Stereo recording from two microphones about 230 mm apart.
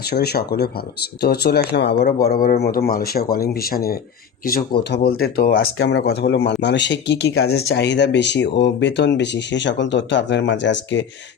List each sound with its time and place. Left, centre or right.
0.1 s speech: left